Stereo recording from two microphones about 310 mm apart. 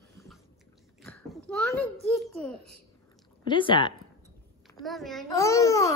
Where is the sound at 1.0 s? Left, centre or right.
Centre.